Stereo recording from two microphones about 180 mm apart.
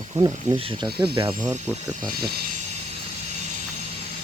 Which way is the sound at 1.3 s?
40° right (ahead or behind).